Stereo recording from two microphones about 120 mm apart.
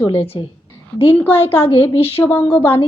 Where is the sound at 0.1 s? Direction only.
50° left (ahead or behind).